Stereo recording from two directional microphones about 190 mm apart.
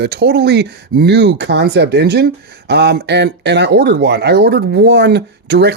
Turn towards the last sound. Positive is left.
turn(degrees=-65)  # may be behind; listen again after turning